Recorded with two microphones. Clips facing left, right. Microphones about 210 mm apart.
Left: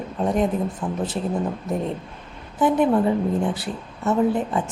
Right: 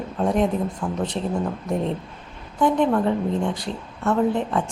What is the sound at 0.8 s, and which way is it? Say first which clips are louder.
Speech: even; 15° left (ahead or behind).